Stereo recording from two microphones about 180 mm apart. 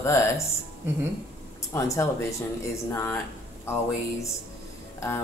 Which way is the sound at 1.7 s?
15° left (ahead or behind).